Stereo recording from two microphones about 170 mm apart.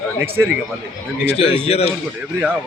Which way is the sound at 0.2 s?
15° right (ahead or behind).